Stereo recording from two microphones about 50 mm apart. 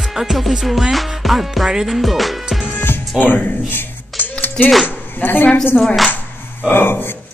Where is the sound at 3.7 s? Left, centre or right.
Left.